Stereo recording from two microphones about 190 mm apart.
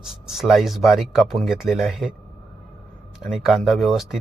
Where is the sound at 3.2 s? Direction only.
Centre (ahead or behind).